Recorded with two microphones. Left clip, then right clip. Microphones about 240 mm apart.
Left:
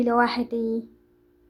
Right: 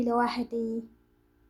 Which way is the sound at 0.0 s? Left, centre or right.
Centre.